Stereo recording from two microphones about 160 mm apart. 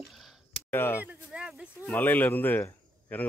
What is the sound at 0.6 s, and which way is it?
Speech, 15° left (ahead or behind).